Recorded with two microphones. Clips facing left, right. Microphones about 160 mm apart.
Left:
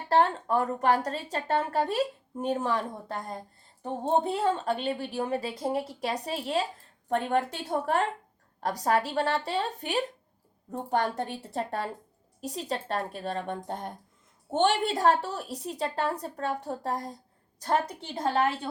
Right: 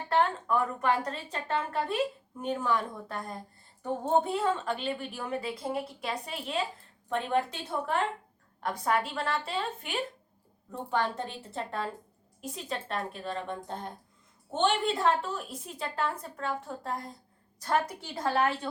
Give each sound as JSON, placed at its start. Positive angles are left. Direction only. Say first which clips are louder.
{"t": 0.1, "sound": "a woman's voice", "louder": "left 3 dB", "side_deg": 35}
{"t": 7.1, "sound": "a woman's voice", "louder": "left 2 dB", "side_deg": 45}